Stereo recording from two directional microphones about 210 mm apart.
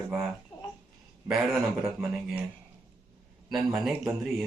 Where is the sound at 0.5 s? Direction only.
25° left (ahead or behind).